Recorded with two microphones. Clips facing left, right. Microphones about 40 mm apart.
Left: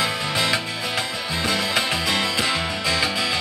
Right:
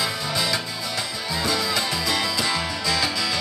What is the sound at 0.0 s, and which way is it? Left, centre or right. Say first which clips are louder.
Music: left 3 dB; left.